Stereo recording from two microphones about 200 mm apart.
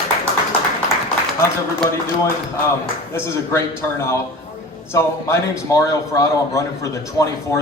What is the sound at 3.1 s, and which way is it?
A man's voice, 10° left (ahead or behind).